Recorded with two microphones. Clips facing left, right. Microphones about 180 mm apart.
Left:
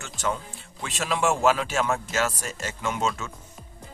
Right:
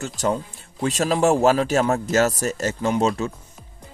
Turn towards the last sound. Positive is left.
turn(degrees=-35)  # may be behind; listen again after turning